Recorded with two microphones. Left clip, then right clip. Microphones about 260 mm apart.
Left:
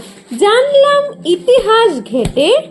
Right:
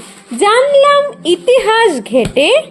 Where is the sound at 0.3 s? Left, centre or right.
Right.